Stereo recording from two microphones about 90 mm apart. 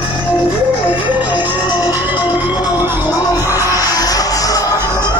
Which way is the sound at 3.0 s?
45° left (ahead or behind).